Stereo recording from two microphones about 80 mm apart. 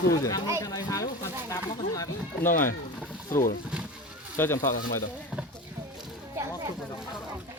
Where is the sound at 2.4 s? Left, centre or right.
Left.